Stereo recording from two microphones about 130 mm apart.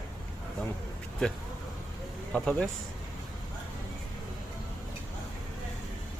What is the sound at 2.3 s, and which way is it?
Speech, 10° left (ahead or behind).